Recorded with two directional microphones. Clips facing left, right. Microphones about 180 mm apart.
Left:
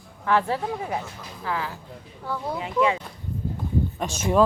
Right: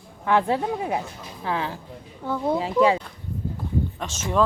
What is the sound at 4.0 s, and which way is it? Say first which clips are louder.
Speech: left 4 dB; 10° left (ahead or behind).